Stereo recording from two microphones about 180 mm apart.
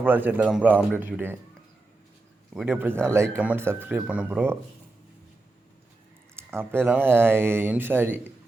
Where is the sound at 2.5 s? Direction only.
5° right (ahead or behind).